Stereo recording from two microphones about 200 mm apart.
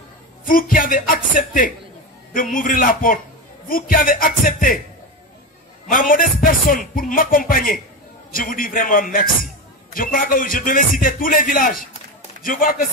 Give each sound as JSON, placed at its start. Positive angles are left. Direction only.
{"t": 0.5, "sound": "speech", "side_deg": 45}
{"t": 5.9, "sound": "speech", "side_deg": 45}